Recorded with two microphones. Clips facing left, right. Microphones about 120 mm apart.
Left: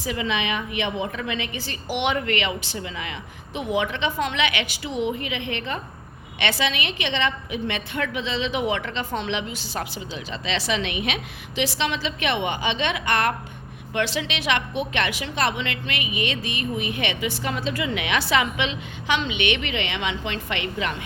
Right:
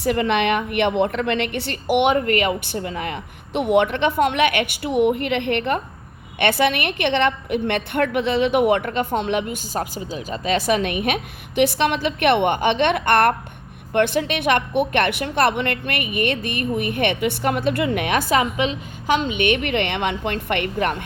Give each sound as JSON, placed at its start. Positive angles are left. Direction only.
{"t": 0.0, "sound": "a woman's voice", "side_deg": -60}